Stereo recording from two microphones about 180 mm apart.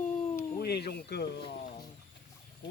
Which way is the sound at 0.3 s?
60° left (ahead or behind).